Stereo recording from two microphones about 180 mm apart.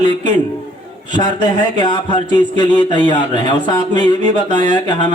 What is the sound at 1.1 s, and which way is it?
Speech, 25° left (ahead or behind).